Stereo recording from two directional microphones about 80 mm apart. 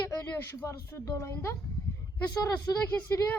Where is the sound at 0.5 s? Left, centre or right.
Left.